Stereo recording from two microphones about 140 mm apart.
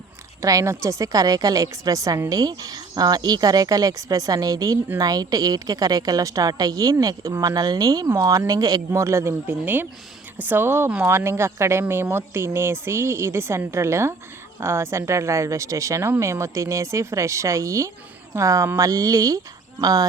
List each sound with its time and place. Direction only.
0.4 s a woman's voice: 20° right (ahead or behind)